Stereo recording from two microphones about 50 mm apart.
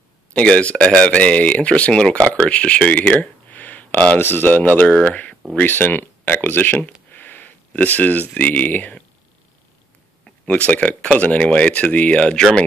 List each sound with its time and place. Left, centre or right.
0.3 s speech: left
3.0 s a sound: left
4.2 s speech: left
4.9 s speech: left
5.7 s speech: left
10.7 s speech: left
12.4 s speech: centre